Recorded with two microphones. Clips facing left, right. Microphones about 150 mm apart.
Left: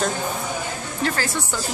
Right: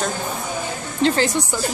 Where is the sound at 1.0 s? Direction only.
25° right (ahead or behind).